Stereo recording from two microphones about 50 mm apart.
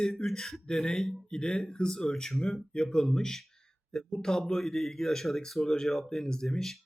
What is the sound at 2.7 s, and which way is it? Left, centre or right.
Speech, centre.